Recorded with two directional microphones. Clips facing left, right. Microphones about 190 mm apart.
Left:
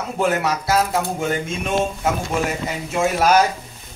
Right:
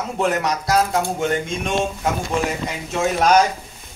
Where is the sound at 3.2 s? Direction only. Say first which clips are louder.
Right 1 dB; 5° left (ahead or behind).